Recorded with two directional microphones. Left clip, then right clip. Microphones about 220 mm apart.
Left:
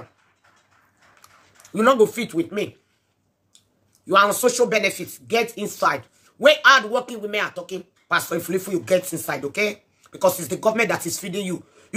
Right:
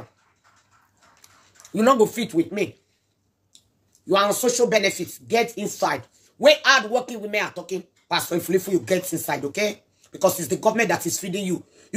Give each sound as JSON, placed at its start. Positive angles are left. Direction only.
{"t": 1.2, "sound": "speech", "side_deg": 0}
{"t": 4.1, "sound": "speech", "side_deg": 10}